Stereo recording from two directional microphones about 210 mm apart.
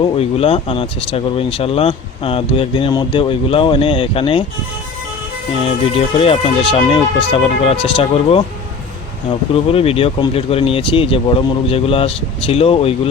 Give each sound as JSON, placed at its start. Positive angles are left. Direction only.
{"t": 0.0, "sound": "speech", "side_deg": 30}
{"t": 5.6, "sound": "speech", "side_deg": 25}
{"t": 9.6, "sound": "speech", "side_deg": 25}